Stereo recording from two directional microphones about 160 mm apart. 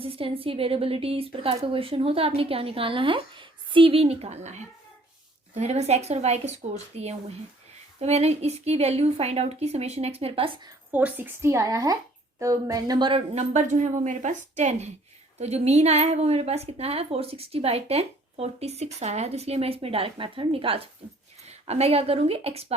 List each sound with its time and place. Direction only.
0.0 s a woman's voice: 35° right (ahead or behind)
10.9 s a woman's voice: 10° right (ahead or behind); by 22.6 s 40° right (ahead or behind)